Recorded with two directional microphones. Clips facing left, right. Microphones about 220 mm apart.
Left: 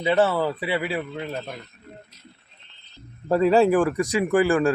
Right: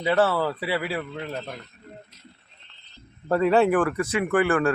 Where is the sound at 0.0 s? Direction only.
20° left (ahead or behind).